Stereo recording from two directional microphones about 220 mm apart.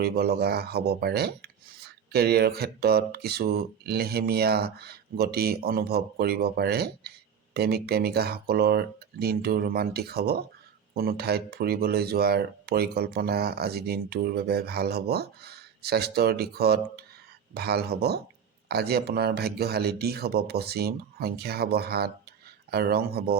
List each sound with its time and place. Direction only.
0.0 s speech: 45° right (ahead or behind)